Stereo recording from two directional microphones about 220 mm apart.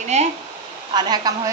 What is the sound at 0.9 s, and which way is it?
Speech, 20° right (ahead or behind).